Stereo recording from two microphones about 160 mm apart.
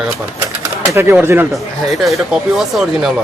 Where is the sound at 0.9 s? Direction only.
15° right (ahead or behind).